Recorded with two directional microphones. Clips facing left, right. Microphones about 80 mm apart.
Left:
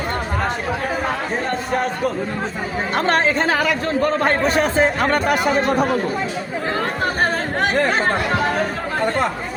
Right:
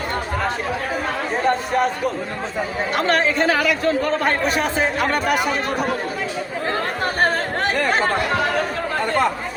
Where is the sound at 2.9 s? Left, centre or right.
Left.